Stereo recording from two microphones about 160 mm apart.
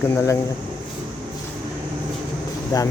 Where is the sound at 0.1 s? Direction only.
15° left (ahead or behind).